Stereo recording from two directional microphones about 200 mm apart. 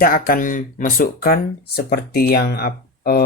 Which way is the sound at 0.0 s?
45° left (ahead or behind).